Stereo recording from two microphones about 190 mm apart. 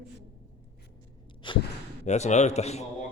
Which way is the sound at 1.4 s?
25° left (ahead or behind).